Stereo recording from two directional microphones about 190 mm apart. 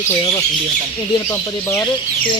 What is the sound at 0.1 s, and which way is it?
Speech, 20° left (ahead or behind).